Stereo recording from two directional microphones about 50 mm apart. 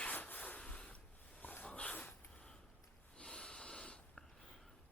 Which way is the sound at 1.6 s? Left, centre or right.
Left.